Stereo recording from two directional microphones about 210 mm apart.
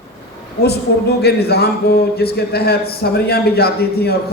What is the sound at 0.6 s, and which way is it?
Speech, 50° left (ahead or behind).